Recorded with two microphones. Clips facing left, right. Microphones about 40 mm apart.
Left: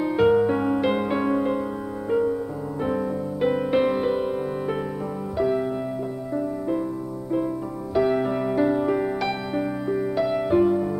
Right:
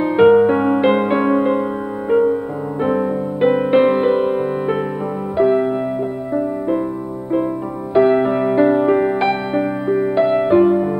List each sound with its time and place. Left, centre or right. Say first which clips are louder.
0.0 s music: right 8 dB; right
7.9 s music: right 8 dB; right